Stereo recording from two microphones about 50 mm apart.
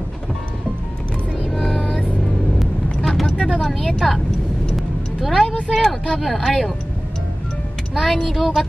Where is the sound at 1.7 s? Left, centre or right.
Centre.